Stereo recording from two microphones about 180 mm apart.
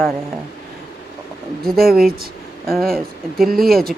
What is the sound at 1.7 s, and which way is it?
Speech, 55° right (ahead or behind).